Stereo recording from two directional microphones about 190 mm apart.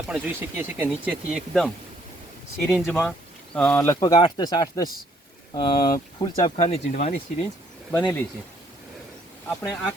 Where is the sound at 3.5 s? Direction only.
10° left (ahead or behind).